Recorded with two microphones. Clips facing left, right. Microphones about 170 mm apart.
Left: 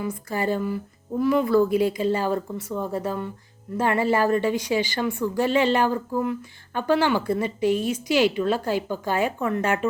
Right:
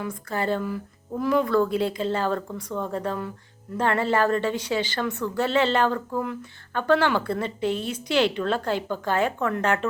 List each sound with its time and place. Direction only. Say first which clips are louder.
0.0 s a woman's voice: left 2 dB; 10° left (ahead or behind)